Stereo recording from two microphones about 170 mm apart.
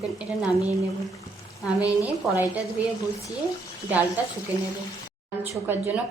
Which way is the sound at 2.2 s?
Centre (ahead or behind).